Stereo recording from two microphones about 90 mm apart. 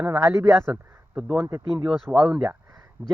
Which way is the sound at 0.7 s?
5° right (ahead or behind).